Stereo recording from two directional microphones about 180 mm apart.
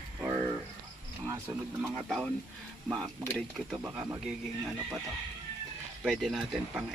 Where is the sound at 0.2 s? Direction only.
10° right (ahead or behind).